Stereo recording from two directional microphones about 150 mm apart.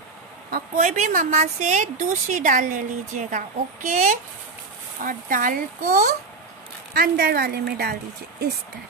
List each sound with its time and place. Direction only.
0.7 s a woman's voice: 55° right (ahead or behind)
6.9 s speech: 90° right